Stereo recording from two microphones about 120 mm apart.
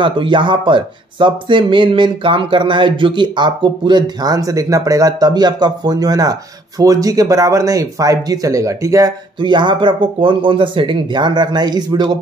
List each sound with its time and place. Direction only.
0.0 s speech: 40° right (ahead or behind)
9.4 s speech: 40° right (ahead or behind)